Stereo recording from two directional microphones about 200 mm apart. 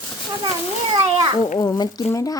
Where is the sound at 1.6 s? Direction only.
20° left (ahead or behind).